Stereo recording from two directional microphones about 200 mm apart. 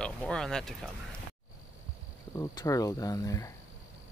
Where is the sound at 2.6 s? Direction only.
15° left (ahead or behind).